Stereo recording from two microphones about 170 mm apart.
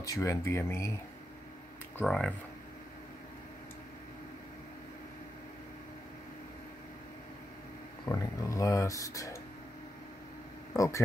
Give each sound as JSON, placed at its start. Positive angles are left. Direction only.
{"t": 0.0, "sound": "speech", "side_deg": 20}
{"t": 2.0, "sound": "speech", "side_deg": 5}
{"t": 8.0, "sound": "speech", "side_deg": 20}
{"t": 10.7, "sound": "speech", "side_deg": 15}